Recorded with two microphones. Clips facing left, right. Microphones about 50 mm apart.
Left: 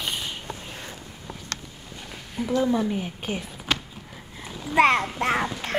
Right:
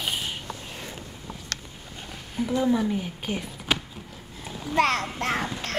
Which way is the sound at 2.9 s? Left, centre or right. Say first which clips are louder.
Even; centre.